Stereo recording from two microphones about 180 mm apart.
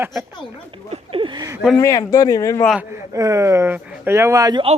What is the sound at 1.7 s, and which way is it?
Speech, 20° left (ahead or behind).